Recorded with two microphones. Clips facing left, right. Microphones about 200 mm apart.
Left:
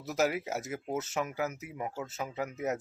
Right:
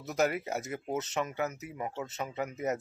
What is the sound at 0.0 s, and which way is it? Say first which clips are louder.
Speech: even; 5° left (ahead or behind).